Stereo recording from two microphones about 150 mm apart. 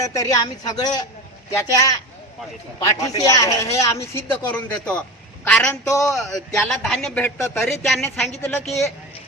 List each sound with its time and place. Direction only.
0.0 s a man's voice: 20° left (ahead or behind); by 5.9 s 5° left (ahead or behind)
5.9 s speech: 20° left (ahead or behind)
6.1 s a man's voice: centre (ahead or behind)
8.4 s a woman's voice: 15° left (ahead or behind)